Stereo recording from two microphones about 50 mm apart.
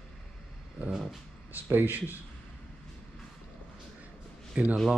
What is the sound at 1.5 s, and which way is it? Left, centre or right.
Speech, right.